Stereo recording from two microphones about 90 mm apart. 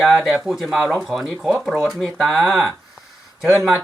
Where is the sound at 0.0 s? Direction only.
Centre (ahead or behind).